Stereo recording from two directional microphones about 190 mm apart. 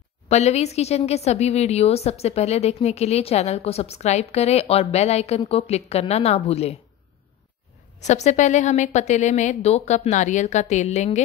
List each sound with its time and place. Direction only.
0.3 s a woman's voice: 35° left (ahead or behind)
8.0 s a woman's voice: 35° left (ahead or behind)